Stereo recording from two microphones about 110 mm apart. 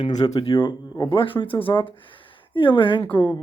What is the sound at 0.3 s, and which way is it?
Speech, 50° left (ahead or behind).